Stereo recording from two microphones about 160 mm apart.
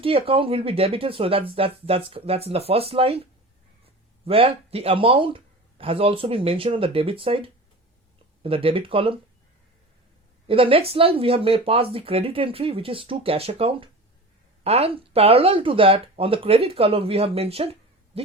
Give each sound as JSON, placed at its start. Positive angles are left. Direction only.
{"t": 0.0, "sound": "speech", "side_deg": -35}
{"t": 4.3, "sound": "speech", "side_deg": -40}
{"t": 10.4, "sound": "speech", "side_deg": -35}